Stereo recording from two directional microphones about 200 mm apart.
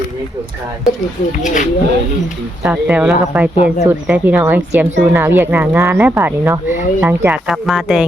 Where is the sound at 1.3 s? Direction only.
40° left (ahead or behind).